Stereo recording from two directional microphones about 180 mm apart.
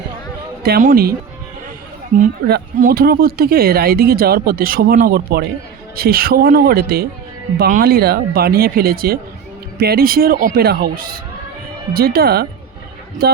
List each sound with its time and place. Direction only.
0.6 s speech: 55° right (ahead or behind)
2.5 s speech: 55° right (ahead or behind)